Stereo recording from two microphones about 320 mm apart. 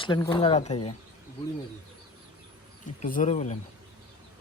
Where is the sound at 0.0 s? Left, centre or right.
Centre.